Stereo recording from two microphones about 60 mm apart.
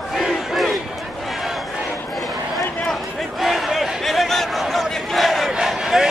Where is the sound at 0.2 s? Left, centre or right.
Centre.